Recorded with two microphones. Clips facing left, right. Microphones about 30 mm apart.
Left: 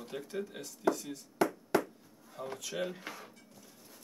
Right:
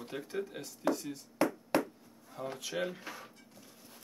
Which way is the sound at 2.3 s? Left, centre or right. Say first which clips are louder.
Right 1 dB; centre.